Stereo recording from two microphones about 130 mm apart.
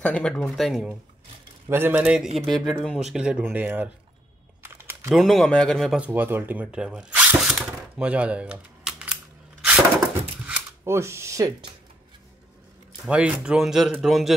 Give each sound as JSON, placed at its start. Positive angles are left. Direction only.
{"t": 0.0, "sound": "speech", "side_deg": 5}
{"t": 1.7, "sound": "speech", "side_deg": -15}
{"t": 2.3, "sound": "speech", "side_deg": 0}
{"t": 5.1, "sound": "speech", "side_deg": 0}
{"t": 5.9, "sound": "speech", "side_deg": -15}
{"t": 10.8, "sound": "speech", "side_deg": -20}
{"t": 13.0, "sound": "speech", "side_deg": -10}